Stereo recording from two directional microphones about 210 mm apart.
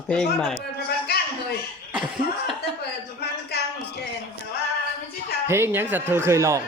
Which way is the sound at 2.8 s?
50° left (ahead or behind).